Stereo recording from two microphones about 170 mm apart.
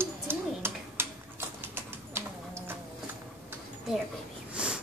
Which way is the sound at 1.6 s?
15° right (ahead or behind).